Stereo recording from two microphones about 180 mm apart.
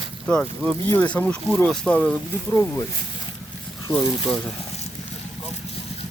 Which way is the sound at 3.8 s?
20° left (ahead or behind).